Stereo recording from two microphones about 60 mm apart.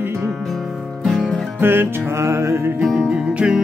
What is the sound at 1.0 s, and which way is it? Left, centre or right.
Music, centre.